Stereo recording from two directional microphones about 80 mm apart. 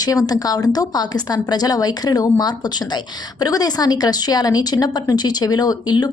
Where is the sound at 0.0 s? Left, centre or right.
Left.